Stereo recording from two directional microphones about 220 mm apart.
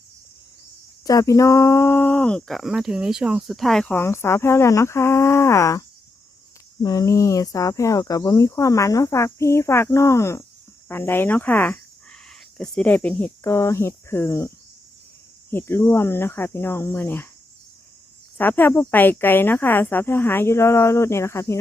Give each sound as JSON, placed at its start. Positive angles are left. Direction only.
{"t": 1.0, "sound": "speech", "side_deg": 15}
{"t": 6.8, "sound": "speech", "side_deg": 15}
{"t": 18.3, "sound": "speech", "side_deg": 10}